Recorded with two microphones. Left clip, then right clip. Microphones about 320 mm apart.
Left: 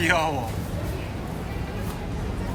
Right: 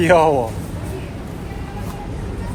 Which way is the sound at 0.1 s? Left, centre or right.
Centre.